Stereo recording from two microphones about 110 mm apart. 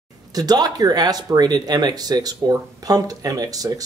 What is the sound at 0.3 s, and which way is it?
Speech, 35° right (ahead or behind).